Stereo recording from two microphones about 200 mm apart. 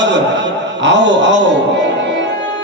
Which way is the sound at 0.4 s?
65° right (ahead or behind).